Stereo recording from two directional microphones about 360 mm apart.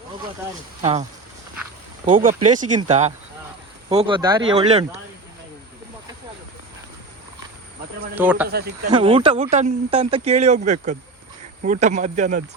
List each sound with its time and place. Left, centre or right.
0.8 s speech: centre
2.0 s speech: right
8.1 s speech: centre
8.4 s speech: right
8.9 s speech: centre